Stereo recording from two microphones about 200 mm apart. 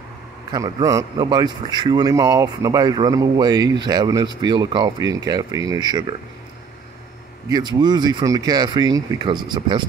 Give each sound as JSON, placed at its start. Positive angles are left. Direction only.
{"t": 0.5, "sound": "speech", "side_deg": -20}
{"t": 7.4, "sound": "speech", "side_deg": -20}